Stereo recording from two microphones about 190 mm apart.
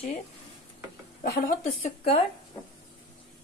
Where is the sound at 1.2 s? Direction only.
55° left (ahead or behind).